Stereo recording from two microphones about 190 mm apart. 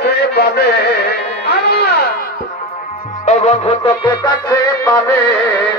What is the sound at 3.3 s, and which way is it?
Music, 35° left (ahead or behind).